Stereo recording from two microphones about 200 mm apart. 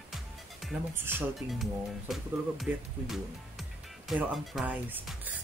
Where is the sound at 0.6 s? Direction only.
5° right (ahead or behind).